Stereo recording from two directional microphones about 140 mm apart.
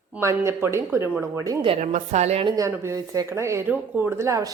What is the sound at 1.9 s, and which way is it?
Speech, 55° right (ahead or behind).